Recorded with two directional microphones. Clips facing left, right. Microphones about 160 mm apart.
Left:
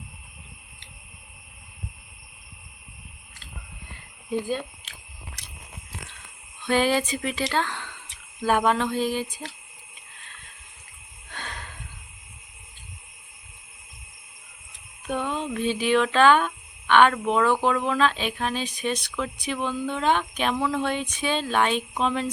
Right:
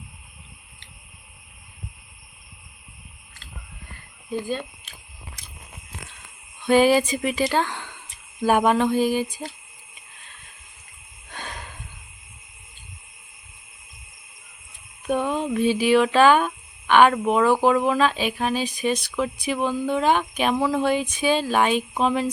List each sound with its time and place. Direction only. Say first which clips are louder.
4.3 s speech: even; 10° left (ahead or behind)
5.4 s biting: even; 70° left (ahead or behind)
6.7 s speech: right 5 dB; 10° right (ahead or behind)
11.3 s a sound: right 2 dB; 10° right (ahead or behind)
15.0 s speech: right 5 dB; 10° right (ahead or behind)